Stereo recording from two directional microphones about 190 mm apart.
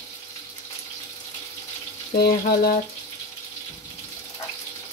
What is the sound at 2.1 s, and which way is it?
Speech, 55° left (ahead or behind).